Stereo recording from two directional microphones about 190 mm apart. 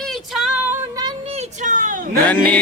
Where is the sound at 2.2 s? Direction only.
10° left (ahead or behind).